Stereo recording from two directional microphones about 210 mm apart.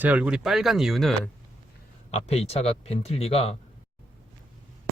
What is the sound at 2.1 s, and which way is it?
Speech, 30° left (ahead or behind).